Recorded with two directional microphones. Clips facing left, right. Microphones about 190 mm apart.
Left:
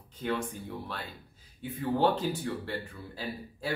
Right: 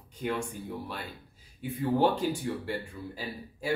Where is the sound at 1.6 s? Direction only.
10° right (ahead or behind).